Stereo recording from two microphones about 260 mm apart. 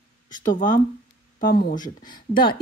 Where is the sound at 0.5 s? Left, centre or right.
Left.